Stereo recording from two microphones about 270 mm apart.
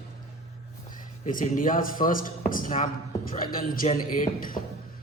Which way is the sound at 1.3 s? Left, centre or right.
Left.